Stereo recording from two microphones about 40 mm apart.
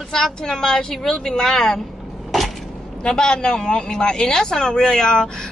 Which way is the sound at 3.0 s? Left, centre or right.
Centre.